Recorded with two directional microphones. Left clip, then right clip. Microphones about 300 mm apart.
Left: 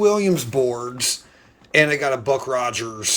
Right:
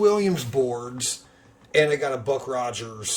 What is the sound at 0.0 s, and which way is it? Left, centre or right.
Speech, centre.